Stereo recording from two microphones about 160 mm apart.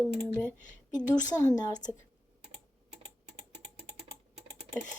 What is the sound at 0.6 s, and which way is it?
A woman's voice, 50° left (ahead or behind).